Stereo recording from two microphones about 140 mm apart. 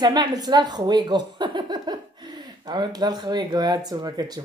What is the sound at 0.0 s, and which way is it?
A woman's voice, 30° right (ahead or behind).